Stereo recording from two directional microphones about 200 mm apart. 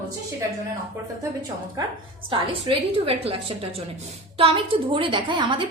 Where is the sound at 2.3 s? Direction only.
25° right (ahead or behind).